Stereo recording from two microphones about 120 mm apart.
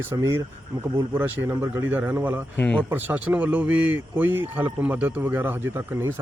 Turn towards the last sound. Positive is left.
turn(degrees=-20)  # may be behind; listen again after turning